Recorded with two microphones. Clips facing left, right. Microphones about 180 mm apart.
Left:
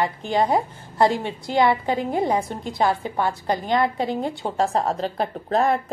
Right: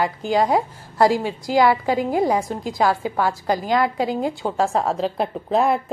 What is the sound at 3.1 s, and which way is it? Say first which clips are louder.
Speech: right 2 dB; 25° left (ahead or behind).